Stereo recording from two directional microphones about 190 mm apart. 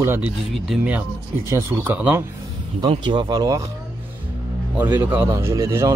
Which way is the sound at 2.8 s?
25° right (ahead or behind).